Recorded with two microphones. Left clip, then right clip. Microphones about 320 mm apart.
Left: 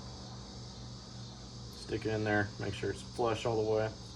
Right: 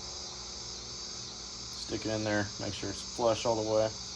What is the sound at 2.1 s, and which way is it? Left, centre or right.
Speech, right.